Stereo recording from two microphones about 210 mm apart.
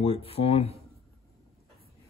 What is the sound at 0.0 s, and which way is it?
Speech, 25° left (ahead or behind).